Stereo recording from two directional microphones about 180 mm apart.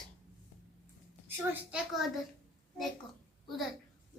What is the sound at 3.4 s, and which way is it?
Speech, centre (ahead or behind).